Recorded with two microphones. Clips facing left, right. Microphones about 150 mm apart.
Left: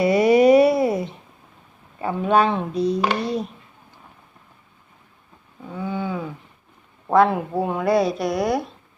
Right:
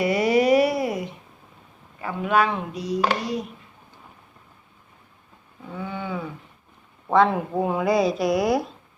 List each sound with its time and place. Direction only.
0.0 s a sound: 25° left (ahead or behind)
2.0 s speech: 30° left (ahead or behind)
5.7 s wild animals: 10° left (ahead or behind)
7.1 s speech: 5° left (ahead or behind)